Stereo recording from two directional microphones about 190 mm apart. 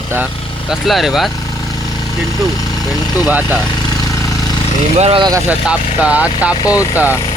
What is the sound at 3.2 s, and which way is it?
Speech, 10° right (ahead or behind).